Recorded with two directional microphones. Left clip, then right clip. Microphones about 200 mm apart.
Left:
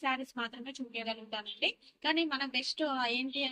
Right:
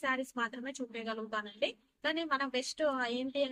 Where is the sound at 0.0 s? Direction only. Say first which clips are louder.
Even; 15° right (ahead or behind).